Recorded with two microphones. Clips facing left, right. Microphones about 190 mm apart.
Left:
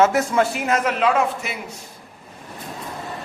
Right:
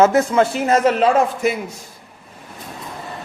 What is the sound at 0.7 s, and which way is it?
Speech, 35° right (ahead or behind).